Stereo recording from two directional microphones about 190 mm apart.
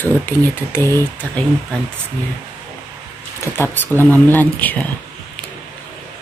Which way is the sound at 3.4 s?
10° left (ahead or behind).